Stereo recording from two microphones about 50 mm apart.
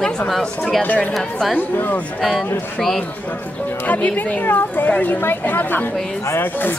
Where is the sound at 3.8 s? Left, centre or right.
Left.